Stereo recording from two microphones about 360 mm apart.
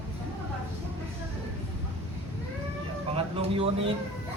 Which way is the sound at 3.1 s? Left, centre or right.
Centre.